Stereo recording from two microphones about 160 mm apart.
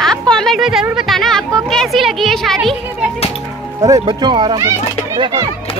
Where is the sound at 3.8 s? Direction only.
25° right (ahead or behind).